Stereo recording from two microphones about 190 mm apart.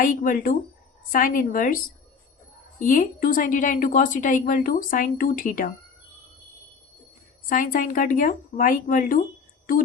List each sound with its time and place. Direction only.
0.0 s a woman's voice: 45° left (ahead or behind)
7.5 s a woman's voice: 45° left (ahead or behind)